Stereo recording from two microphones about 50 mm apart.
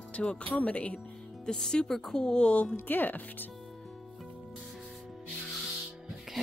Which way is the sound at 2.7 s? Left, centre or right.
Left.